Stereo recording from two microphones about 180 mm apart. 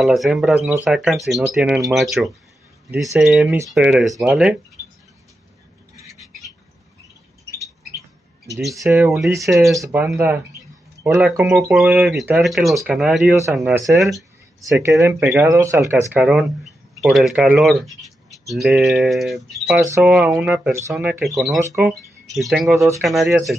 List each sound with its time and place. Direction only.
0.0 s speech: centre (ahead or behind)
8.8 s speech: 10° right (ahead or behind)
9.3 s speech: 15° right (ahead or behind); by 14.2 s centre (ahead or behind)
14.6 s speech: 15° right (ahead or behind); by 23.5 s centre (ahead or behind)